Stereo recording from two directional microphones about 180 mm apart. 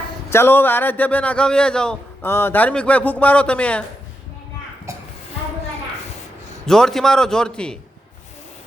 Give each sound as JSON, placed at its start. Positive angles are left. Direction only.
{"t": 0.3, "sound": "a man's voice", "side_deg": 10}
{"t": 4.9, "sound": "a sound", "side_deg": -15}
{"t": 6.7, "sound": "a man's voice", "side_deg": 5}